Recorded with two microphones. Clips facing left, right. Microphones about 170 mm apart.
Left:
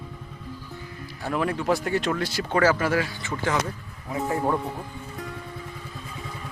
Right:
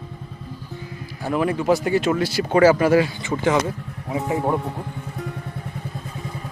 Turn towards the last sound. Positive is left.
turn(degrees=-20)  # may be behind; listen again after turning